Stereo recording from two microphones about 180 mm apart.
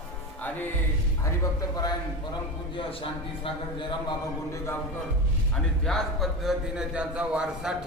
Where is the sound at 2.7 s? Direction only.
30° left (ahead or behind).